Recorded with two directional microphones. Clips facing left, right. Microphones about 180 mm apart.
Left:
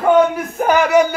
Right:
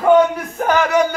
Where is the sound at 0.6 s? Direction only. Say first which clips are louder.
Left 2 dB; 10° left (ahead or behind).